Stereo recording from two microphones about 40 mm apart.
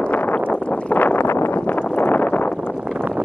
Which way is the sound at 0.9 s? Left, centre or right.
Left.